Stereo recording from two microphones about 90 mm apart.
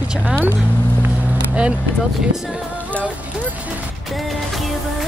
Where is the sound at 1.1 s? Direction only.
15° right (ahead or behind).